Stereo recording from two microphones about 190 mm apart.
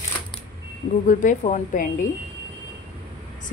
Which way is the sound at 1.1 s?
45° left (ahead or behind).